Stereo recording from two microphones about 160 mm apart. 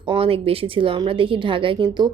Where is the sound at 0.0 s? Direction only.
35° right (ahead or behind).